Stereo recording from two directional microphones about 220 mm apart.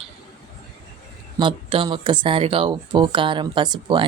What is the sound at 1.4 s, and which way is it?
Speech, 25° right (ahead or behind).